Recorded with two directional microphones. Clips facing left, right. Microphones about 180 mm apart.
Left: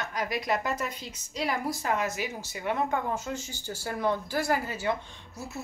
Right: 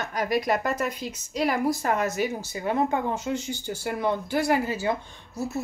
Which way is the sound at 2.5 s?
35° right (ahead or behind).